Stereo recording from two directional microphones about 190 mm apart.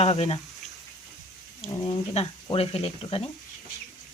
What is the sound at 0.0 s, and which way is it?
Speech, 30° left (ahead or behind).